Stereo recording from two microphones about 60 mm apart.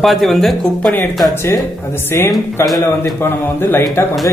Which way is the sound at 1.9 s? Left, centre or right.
Left.